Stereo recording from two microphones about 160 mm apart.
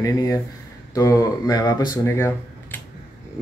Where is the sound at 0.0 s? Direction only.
20° left (ahead or behind).